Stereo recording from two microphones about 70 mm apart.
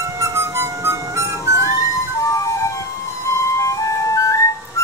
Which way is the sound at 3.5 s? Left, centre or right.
Left.